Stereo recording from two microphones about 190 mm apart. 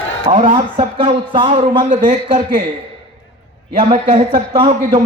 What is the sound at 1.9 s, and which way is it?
Speech, 40° right (ahead or behind).